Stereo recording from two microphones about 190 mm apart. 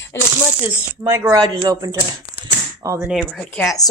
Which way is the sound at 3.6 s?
20° left (ahead or behind).